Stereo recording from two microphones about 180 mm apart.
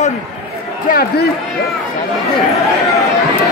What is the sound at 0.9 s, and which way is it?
Speech, 55° left (ahead or behind).